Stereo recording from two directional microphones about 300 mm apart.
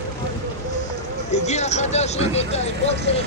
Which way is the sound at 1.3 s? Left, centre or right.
Left.